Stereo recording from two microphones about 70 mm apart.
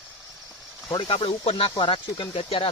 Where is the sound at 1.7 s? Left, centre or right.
Left.